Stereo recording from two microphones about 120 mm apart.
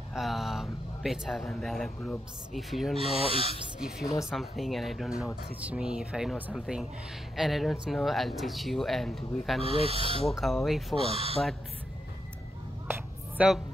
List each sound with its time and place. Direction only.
0.1 s speech: centre (ahead or behind)
3.3 s speech: 50° right (ahead or behind)
4.0 s speech: 25° left (ahead or behind)
4.3 s speech: centre (ahead or behind)
9.6 s speech: 55° right (ahead or behind)
10.2 s speech: centre (ahead or behind)
11.1 s speech: 55° right (ahead or behind)
13.4 s speech: 10° right (ahead or behind)